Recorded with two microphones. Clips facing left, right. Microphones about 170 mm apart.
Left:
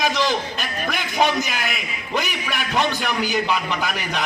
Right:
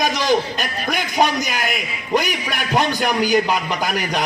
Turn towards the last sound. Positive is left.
turn(degrees=-40)  # may be behind; listen again after turning